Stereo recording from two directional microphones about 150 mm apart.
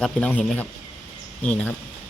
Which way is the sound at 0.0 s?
10° left (ahead or behind).